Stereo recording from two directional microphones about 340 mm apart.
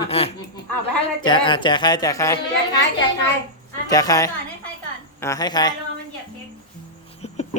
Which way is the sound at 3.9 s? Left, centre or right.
Centre.